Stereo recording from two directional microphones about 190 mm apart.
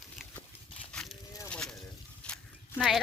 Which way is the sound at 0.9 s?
5° left (ahead or behind).